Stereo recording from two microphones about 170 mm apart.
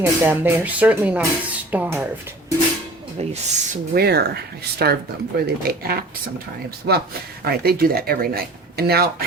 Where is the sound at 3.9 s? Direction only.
70° right (ahead or behind).